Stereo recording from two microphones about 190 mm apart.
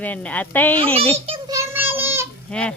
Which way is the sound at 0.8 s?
30° right (ahead or behind).